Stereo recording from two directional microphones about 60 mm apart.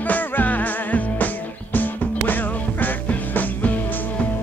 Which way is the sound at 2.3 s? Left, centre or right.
Left.